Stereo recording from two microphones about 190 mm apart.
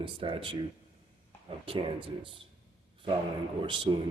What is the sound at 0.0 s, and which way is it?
Speech, 25° right (ahead or behind).